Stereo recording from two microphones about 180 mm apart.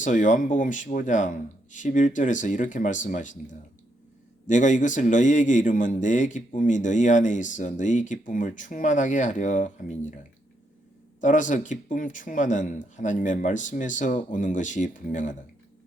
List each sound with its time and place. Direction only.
0.0 s a man's voice: 45° left (ahead or behind)
4.4 s a man's voice: 45° left (ahead or behind)
11.2 s a man's voice: 45° left (ahead or behind)